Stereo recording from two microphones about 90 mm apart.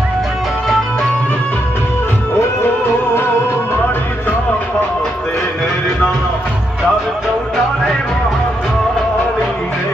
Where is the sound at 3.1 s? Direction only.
25° left (ahead or behind).